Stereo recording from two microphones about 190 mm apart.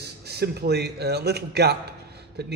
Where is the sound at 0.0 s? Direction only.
60° right (ahead or behind).